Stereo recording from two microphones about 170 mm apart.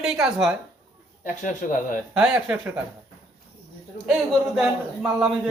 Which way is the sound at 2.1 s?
5° right (ahead or behind).